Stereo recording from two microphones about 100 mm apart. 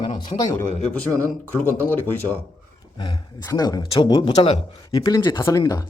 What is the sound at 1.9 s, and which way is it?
Speech, 20° left (ahead or behind).